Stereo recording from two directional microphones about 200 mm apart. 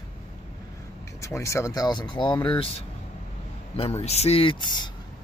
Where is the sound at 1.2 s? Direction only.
15° left (ahead or behind).